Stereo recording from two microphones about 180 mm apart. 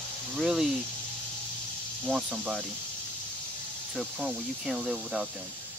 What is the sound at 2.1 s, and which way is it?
Speech, 5° right (ahead or behind).